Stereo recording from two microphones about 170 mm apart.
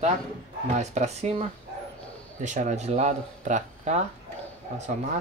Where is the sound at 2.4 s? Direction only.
45° right (ahead or behind).